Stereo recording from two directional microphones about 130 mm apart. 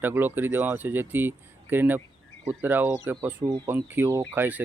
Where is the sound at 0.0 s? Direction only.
15° right (ahead or behind).